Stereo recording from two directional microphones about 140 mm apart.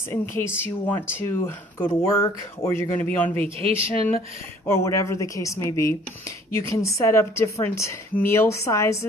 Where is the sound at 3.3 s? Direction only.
45° right (ahead or behind).